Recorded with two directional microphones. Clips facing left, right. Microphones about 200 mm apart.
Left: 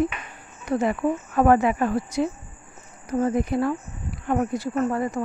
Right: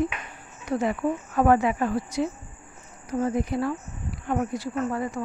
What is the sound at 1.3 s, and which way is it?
Speech, 55° left (ahead or behind).